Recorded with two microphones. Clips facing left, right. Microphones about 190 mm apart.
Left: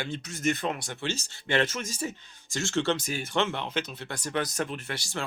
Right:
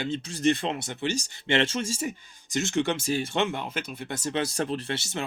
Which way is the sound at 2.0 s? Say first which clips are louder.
Right 2 dB; 20° right (ahead or behind).